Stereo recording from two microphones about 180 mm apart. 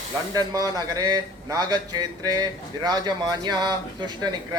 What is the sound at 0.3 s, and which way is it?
A man's voice, 20° right (ahead or behind).